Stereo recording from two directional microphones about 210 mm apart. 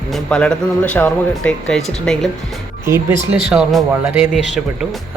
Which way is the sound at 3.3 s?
5° right (ahead or behind).